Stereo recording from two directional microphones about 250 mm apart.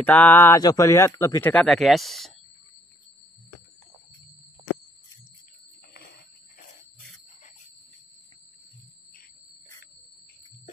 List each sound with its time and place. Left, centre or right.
0.0 s speech: centre